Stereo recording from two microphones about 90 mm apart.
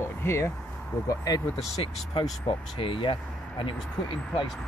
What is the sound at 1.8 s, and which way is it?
Speech, 70° left (ahead or behind).